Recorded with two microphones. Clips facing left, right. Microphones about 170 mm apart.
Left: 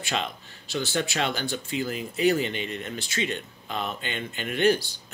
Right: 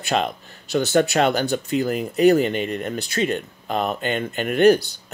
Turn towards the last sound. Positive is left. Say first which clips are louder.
# right 8 dB
turn(degrees=-45)  # may be behind; listen again after turning